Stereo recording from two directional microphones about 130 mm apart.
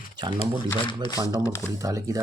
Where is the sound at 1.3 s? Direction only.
25° left (ahead or behind).